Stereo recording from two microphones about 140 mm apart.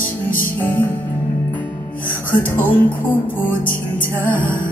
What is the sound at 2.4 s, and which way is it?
Speech, 15° left (ahead or behind).